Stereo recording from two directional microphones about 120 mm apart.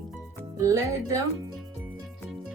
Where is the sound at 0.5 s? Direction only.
25° right (ahead or behind).